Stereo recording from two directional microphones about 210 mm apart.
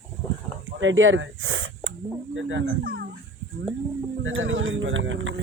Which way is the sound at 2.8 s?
45° right (ahead or behind).